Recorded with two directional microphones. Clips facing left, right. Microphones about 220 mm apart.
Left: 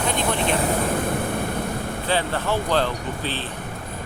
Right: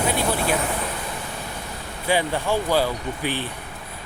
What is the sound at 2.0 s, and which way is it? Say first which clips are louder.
Speech: right 2 dB; 10° right (ahead or behind).